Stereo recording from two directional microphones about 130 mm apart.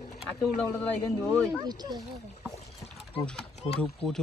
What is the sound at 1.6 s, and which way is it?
Speech, 30° right (ahead or behind).